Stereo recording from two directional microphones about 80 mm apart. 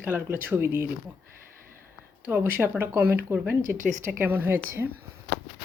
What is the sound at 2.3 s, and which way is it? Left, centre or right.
A woman's voice, right.